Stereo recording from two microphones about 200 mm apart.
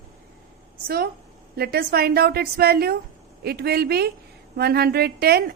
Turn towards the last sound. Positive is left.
turn(degrees=-50)  # may be behind; listen again after turning